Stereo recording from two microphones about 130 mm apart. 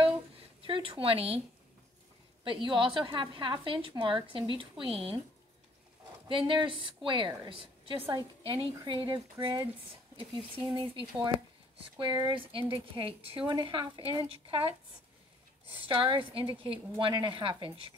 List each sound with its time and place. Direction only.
0.6 s speech: 45° right (ahead or behind)
2.4 s a woman's voice: 40° right (ahead or behind)
6.2 s a woman's voice: 40° right (ahead or behind)
8.1 s a woman's voice: 35° right (ahead or behind)
15.9 s a woman's voice: 40° right (ahead or behind)